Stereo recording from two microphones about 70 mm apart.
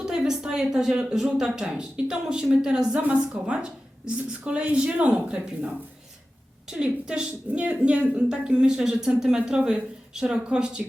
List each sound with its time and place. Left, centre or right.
0.0 s a woman's voice: centre